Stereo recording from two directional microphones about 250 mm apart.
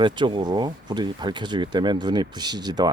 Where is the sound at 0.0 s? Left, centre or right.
Centre.